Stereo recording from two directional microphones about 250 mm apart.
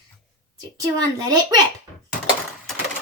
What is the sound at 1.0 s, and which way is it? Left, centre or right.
Speech, centre.